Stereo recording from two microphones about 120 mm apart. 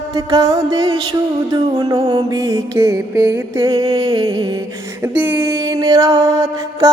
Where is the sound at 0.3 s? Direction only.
25° right (ahead or behind).